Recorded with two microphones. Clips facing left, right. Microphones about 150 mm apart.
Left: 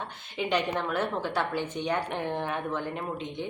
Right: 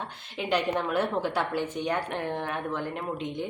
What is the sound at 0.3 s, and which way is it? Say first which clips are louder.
A woman's voice: right 1 dB; 5° right (ahead or behind).